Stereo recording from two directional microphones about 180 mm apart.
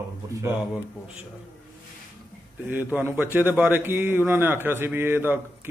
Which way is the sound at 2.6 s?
10° right (ahead or behind).